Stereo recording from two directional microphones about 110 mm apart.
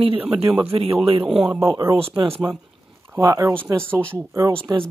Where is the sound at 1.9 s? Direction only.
60° right (ahead or behind).